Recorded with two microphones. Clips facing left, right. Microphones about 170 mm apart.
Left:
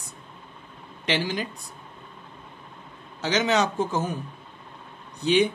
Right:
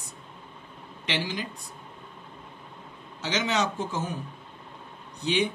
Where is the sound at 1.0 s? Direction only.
40° left (ahead or behind).